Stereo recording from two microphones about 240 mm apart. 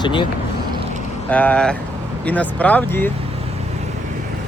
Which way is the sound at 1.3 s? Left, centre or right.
Centre.